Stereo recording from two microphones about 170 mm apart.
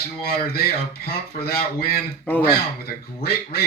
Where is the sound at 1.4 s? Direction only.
65° left (ahead or behind).